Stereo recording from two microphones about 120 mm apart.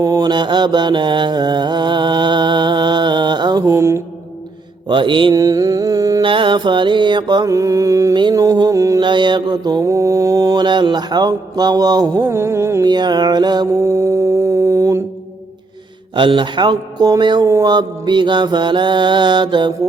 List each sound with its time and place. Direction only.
0.0 s mantra: 35° right (ahead or behind)
3.7 s music: 25° right (ahead or behind)
4.9 s mantra: 40° right (ahead or behind)
5.3 s a sound: 30° right (ahead or behind)
6.2 s mantra: 45° right (ahead or behind); by 9.0 s 25° right (ahead or behind)
9.0 s mantra: 40° right (ahead or behind)
10.6 s mantra: 40° right (ahead or behind)
12.2 s music: 20° right (ahead or behind)
12.8 s mantra: 35° right (ahead or behind)
13.8 s mantra: 25° right (ahead or behind)
16.1 s mantra: 40° right (ahead or behind)
17.4 s mantra: 30° right (ahead or behind)